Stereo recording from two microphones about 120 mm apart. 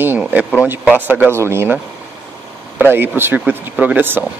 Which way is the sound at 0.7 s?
15° right (ahead or behind).